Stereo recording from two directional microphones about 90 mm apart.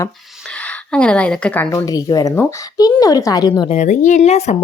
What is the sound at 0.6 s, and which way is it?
A woman's voice, 10° left (ahead or behind).